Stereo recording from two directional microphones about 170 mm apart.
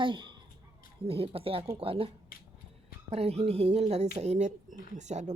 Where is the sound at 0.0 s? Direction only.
30° right (ahead or behind).